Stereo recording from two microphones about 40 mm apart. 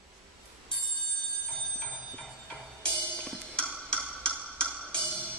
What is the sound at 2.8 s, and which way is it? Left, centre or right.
Music, left.